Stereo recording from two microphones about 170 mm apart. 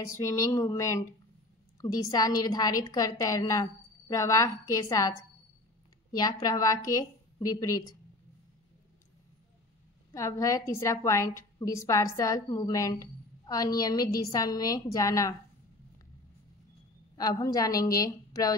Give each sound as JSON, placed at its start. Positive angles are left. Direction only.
{"t": 0.0, "sound": "a woman's voice", "side_deg": 20}
{"t": 6.1, "sound": "a woman's voice", "side_deg": 25}
{"t": 10.1, "sound": "a woman's voice", "side_deg": 20}
{"t": 17.2, "sound": "a woman's voice", "side_deg": 20}